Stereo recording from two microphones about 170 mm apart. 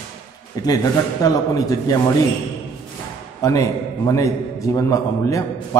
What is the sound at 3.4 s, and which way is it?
A man's voice, 20° left (ahead or behind).